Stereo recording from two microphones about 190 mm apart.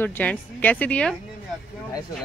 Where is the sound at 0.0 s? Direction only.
10° left (ahead or behind).